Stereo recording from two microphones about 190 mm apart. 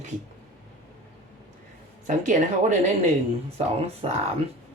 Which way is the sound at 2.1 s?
40° right (ahead or behind).